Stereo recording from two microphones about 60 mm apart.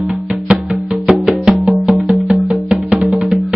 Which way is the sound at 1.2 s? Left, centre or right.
Centre.